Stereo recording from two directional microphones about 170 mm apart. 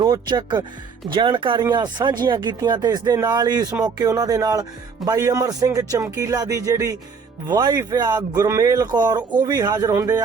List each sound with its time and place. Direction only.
0.0 s speech: 25° right (ahead or behind)